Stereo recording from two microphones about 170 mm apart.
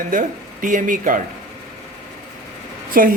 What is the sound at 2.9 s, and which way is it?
Speech, 55° right (ahead or behind).